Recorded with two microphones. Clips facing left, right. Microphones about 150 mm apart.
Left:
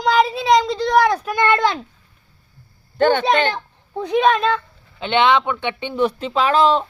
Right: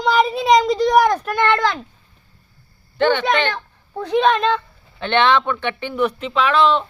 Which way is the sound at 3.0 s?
45° left (ahead or behind).